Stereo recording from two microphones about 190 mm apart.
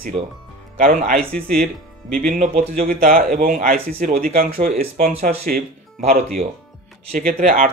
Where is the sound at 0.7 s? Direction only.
50° right (ahead or behind).